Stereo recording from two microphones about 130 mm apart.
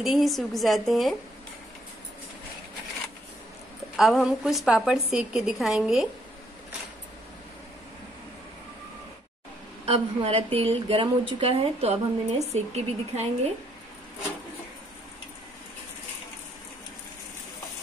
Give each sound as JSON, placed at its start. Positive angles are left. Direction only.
{"t": 0.0, "sound": "a woman's voice", "side_deg": 0}
{"t": 3.9, "sound": "a woman's voice", "side_deg": 0}
{"t": 9.8, "sound": "speech", "side_deg": -50}